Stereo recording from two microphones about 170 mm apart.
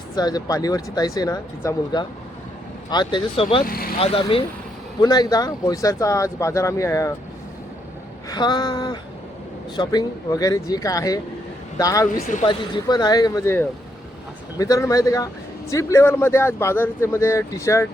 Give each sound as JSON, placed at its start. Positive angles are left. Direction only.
{"t": 0.2, "sound": "speech", "side_deg": 25}
{"t": 3.7, "sound": "speech", "side_deg": 60}
{"t": 4.0, "sound": "speech", "side_deg": 35}
{"t": 4.9, "sound": "speech", "side_deg": 25}
{"t": 8.3, "sound": "speech", "side_deg": 25}
{"t": 12.1, "sound": "speech", "side_deg": 50}
{"t": 12.5, "sound": "speech", "side_deg": 25}